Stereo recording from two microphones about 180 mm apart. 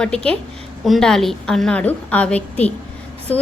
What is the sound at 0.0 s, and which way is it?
A woman's voice, 5° left (ahead or behind).